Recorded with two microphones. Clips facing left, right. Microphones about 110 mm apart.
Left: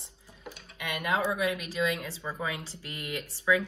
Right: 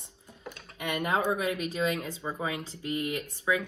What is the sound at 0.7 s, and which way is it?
Speech, 30° right (ahead or behind).